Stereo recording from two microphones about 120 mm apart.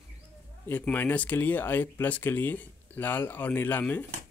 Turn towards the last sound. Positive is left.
turn(degrees=15)  # may be behind; listen again after turning